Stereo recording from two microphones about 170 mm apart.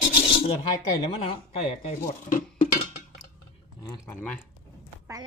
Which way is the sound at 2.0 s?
50° left (ahead or behind).